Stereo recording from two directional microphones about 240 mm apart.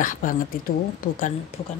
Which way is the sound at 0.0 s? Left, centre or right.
Left.